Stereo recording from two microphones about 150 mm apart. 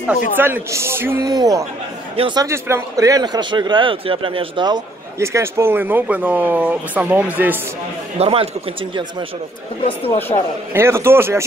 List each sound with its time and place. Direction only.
0.4 s a man's voice: 15° right (ahead or behind); by 2.4 s 35° right (ahead or behind)
2.4 s a man's voice: 20° right (ahead or behind)
8.2 s speech: 40° right (ahead or behind)
10.3 s a man's voice: 30° left (ahead or behind)
10.7 s a man's voice: 15° right (ahead or behind)